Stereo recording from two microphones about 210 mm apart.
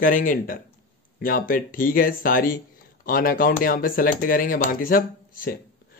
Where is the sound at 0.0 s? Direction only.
40° left (ahead or behind).